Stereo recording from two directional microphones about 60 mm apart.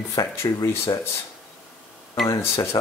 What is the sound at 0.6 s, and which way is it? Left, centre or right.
Speech, left.